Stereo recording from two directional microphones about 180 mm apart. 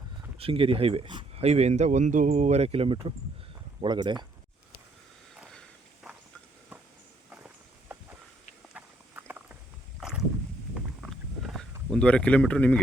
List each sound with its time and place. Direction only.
0.3 s speech: 30° right (ahead or behind)
5.4 s walk: centre (ahead or behind)
7.3 s walk: 10° right (ahead or behind)
10.0 s a sound: 5° right (ahead or behind)